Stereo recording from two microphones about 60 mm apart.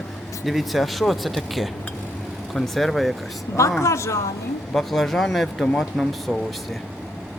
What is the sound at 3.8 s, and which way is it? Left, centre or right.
Speech, left.